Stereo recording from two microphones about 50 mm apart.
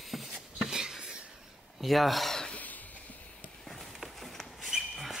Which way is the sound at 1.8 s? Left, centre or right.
Centre.